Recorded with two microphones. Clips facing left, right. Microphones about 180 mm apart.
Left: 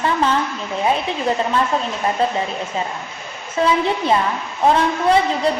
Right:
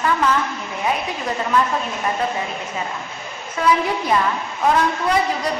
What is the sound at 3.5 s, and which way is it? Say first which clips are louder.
A woman's voice: left 1 dB; 25° left (ahead or behind).